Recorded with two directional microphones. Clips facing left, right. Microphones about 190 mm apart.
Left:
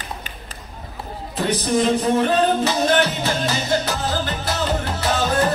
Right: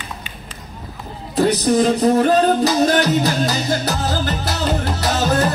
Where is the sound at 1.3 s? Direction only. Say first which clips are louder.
Right 5 dB; 35° right (ahead or behind).